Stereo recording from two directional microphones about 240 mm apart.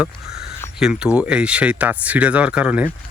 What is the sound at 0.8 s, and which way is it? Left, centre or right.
Speech, centre.